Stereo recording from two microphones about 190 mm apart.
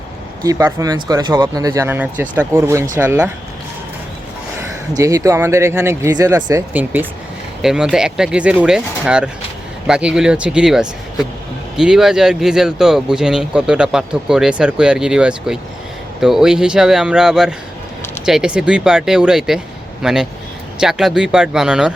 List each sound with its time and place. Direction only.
0.4 s speech: 20° right (ahead or behind)
4.9 s speech: 15° right (ahead or behind)